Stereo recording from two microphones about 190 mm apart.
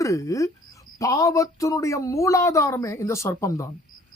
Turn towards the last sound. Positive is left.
turn(degrees=15)  # may be behind; listen again after turning